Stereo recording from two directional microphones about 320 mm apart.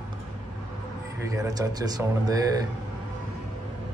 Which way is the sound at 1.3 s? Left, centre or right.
Centre.